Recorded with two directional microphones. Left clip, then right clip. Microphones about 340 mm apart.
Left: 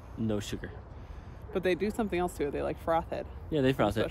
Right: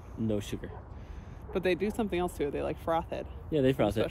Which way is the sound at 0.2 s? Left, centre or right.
Centre.